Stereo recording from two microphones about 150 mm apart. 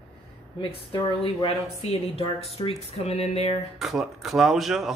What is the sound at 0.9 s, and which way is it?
Speech, 35° left (ahead or behind).